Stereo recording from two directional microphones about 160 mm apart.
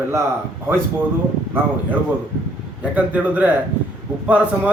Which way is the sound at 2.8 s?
10° right (ahead or behind).